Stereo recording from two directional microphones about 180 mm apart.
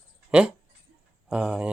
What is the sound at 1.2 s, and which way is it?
Speech, 5° right (ahead or behind).